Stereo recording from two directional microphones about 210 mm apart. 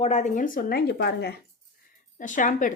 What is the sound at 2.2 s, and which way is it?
Speech, 35° left (ahead or behind).